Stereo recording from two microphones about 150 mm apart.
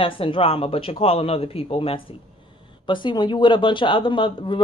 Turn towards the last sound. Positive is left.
turn(degrees=35)  # may be behind; listen again after turning